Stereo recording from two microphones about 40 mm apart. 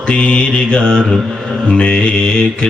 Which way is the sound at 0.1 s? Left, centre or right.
Left.